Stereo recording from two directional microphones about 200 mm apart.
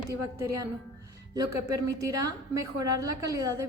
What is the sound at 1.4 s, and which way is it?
A woman's voice, 15° right (ahead or behind).